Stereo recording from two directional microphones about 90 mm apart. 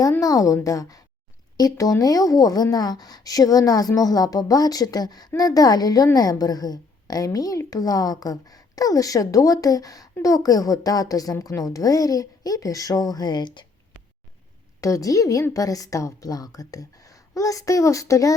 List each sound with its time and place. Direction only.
0.2 s a woman's voice: 40° left (ahead or behind); by 13.7 s 55° left (ahead or behind)
14.8 s a woman's voice: 40° left (ahead or behind)